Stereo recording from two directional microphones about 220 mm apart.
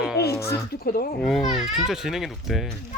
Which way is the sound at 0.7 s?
40° left (ahead or behind).